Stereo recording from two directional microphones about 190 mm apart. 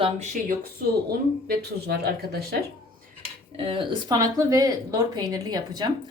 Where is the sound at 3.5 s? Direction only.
30° right (ahead or behind).